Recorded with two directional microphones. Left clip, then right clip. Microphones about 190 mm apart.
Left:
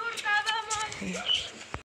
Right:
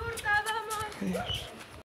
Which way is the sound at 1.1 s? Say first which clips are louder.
Left 7 dB; 60° right (ahead or behind).